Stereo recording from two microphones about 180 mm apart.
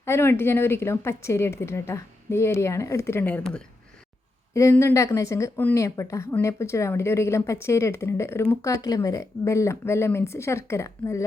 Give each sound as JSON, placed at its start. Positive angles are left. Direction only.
{"t": 0.0, "sound": "speech", "side_deg": 15}